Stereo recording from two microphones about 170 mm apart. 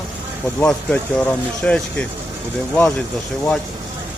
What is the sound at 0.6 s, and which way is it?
Speech, 5° left (ahead or behind).